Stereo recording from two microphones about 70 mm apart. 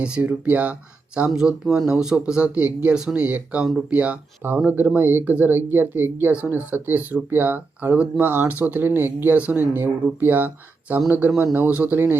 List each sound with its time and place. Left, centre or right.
0.0 s speech: right